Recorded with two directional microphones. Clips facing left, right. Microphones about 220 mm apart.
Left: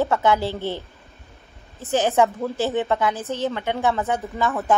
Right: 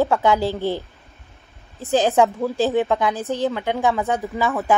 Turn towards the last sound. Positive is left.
turn(degrees=0)  # may be behind; listen again after turning